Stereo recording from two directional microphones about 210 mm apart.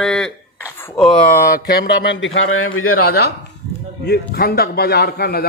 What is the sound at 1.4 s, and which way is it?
A man's voice, 45° left (ahead or behind).